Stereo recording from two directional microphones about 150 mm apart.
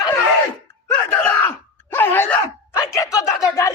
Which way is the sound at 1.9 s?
15° left (ahead or behind).